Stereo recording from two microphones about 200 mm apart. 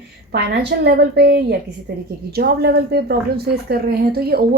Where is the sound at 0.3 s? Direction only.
55° right (ahead or behind).